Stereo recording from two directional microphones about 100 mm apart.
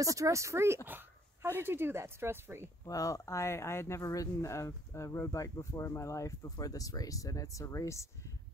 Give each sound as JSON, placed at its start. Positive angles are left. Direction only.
{"t": 0.0, "sound": "speech", "side_deg": -35}
{"t": 0.8, "sound": "dog", "side_deg": -20}
{"t": 1.6, "sound": "speech", "side_deg": -20}
{"t": 2.8, "sound": "speech", "side_deg": 35}